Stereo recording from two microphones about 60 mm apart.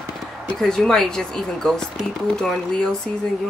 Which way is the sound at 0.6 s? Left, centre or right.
Centre.